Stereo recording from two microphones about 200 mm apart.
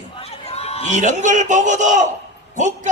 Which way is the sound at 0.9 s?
40° right (ahead or behind).